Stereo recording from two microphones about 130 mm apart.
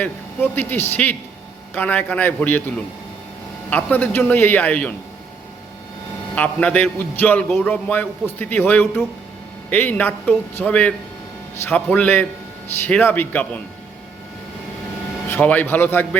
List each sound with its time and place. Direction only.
0.5 s a man's voice: 15° left (ahead or behind)
3.7 s a man's voice: 10° left (ahead or behind)
6.3 s a man's voice: 10° left (ahead or behind)
15.3 s a man's voice: 10° left (ahead or behind)